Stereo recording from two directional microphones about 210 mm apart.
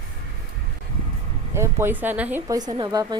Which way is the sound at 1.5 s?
10° right (ahead or behind).